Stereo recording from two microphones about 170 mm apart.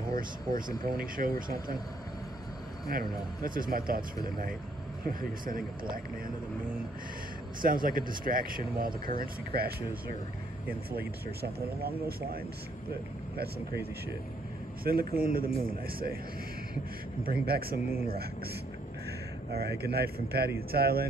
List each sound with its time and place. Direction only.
0.1 s speech: 55° right (ahead or behind)
2.9 s speech: 55° right (ahead or behind)
7.6 s speech: 55° right (ahead or behind)
11.8 s speech: 65° right (ahead or behind)
14.9 s speech: 60° right (ahead or behind)
17.2 s speech: 60° right (ahead or behind)
19.5 s speech: 70° right (ahead or behind)